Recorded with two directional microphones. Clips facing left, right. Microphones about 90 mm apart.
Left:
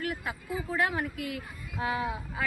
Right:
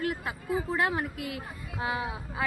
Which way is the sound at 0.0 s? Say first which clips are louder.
Right 2 dB; 25° right (ahead or behind).